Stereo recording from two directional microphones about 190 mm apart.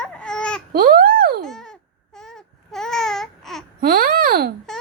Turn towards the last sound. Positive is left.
turn(degrees=-50)  # may be behind; listen again after turning